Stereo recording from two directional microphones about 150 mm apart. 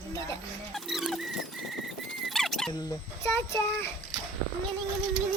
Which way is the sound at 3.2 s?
15° left (ahead or behind).